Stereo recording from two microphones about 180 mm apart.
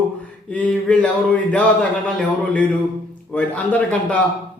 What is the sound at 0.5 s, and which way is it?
Mantra, 5° left (ahead or behind).